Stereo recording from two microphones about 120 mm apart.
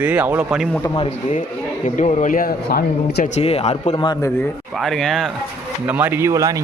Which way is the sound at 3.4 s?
60° left (ahead or behind).